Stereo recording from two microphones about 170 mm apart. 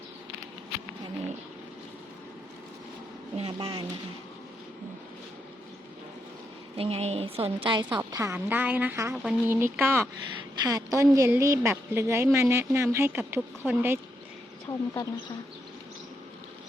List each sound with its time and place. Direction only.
3.3 s speech: 35° right (ahead or behind)
6.7 s a woman's voice: 35° right (ahead or behind); by 14.0 s 10° right (ahead or behind)
14.7 s speech: 20° left (ahead or behind)